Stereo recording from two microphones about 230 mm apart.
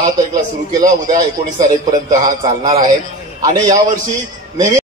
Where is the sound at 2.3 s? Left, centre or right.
Right.